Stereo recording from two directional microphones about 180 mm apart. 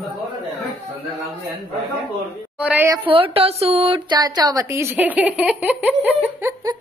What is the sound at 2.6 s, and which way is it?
Speech, 10° right (ahead or behind).